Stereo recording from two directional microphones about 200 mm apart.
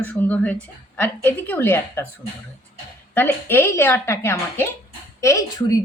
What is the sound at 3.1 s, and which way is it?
A woman's voice, 10° left (ahead or behind).